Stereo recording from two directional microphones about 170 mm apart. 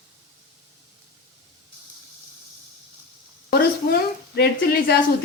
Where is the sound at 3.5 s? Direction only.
70° left (ahead or behind).